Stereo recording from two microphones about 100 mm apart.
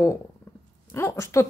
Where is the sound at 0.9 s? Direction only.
30° left (ahead or behind).